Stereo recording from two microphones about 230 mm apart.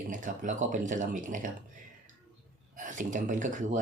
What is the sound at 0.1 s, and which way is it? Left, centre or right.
Speech, right.